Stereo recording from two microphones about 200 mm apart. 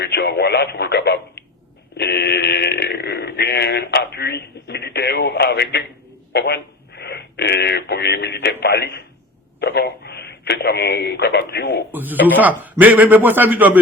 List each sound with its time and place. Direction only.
0.0 s speech: 55° left (ahead or behind)
2.0 s a sound: 55° left (ahead or behind)
6.3 s speech: 55° left (ahead or behind)
11.9 s a man's voice: 10° right (ahead or behind)